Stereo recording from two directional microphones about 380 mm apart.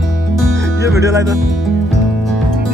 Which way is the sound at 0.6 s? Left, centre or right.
Centre.